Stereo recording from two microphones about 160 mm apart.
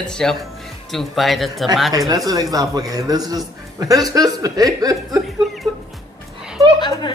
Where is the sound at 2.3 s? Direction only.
20° right (ahead or behind).